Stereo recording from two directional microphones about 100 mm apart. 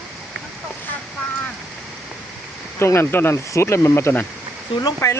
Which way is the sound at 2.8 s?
25° left (ahead or behind).